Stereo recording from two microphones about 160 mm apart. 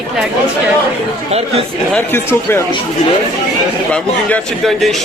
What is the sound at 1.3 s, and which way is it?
Speech, 40° right (ahead or behind).